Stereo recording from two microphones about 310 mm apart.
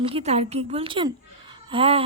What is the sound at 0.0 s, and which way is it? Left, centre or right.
A woman's voice, centre.